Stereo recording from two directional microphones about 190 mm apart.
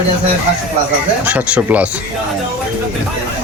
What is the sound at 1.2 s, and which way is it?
Speech, 10° right (ahead or behind).